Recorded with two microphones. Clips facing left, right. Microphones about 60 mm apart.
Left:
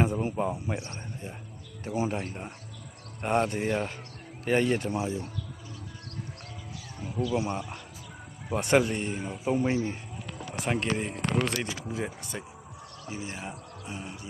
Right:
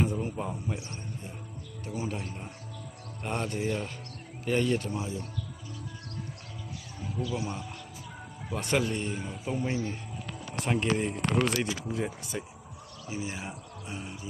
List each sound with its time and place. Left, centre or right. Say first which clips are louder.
0.2 s speech: left 4 dB; left
0.7 s speech: left 3 dB; left
1.8 s speech: left 5 dB; left
7.3 s speech: left 5 dB; left
10.6 s speech: right 1 dB; centre
13.1 s speech: right 1 dB; centre